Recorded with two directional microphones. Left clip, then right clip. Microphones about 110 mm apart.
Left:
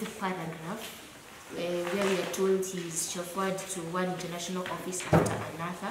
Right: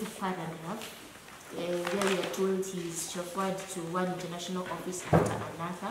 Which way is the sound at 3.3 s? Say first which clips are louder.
Left 1 dB; 5° left (ahead or behind).